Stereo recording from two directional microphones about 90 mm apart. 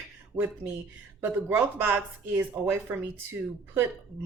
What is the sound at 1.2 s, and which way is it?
Speech, 20° right (ahead or behind).